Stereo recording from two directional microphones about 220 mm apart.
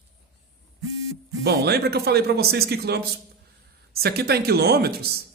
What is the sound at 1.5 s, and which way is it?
Speech, 45° right (ahead or behind).